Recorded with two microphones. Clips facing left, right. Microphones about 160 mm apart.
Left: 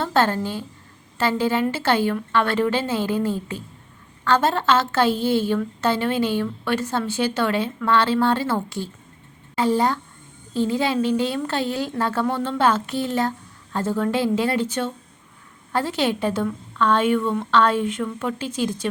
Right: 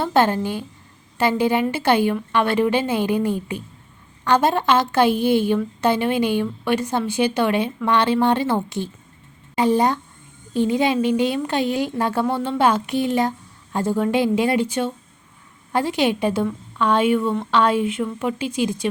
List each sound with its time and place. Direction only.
0.0 s a woman's voice: 15° right (ahead or behind)